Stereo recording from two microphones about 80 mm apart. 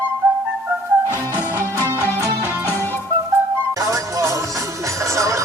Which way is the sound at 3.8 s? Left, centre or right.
Right.